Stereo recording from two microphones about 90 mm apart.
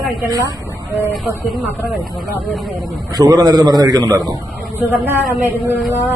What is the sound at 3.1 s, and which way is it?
A man's voice, 45° right (ahead or behind).